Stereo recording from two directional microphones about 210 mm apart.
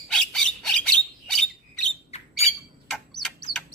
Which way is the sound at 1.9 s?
30° left (ahead or behind).